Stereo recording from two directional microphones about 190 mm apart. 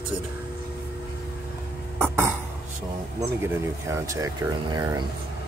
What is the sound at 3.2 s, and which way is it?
Speech, 15° right (ahead or behind).